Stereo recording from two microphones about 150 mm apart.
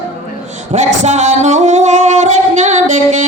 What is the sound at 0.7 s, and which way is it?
Singing, 50° right (ahead or behind).